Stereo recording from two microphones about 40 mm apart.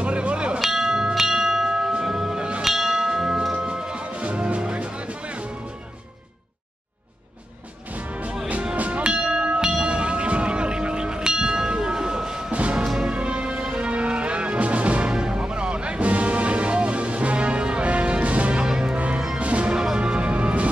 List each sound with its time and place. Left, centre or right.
0.0 s music: right
0.6 s bell: centre
2.6 s bell: centre
3.6 s music: right
7.9 s music: right
9.3 s bell: right
12.7 s music: centre
13.0 s music: right
18.6 s music: centre
18.9 s music: right
19.7 s music: centre